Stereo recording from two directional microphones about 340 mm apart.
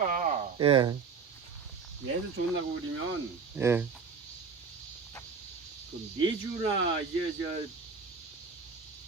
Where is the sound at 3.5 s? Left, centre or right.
Centre.